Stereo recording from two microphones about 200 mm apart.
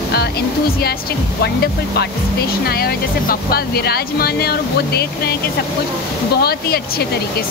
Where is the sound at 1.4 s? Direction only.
55° left (ahead or behind).